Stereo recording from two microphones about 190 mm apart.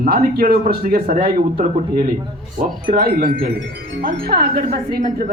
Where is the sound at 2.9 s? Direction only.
45° right (ahead or behind).